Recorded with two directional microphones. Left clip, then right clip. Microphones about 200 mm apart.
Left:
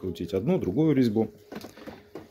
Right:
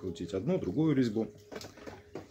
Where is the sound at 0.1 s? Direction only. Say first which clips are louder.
Left 6 dB; 35° left (ahead or behind).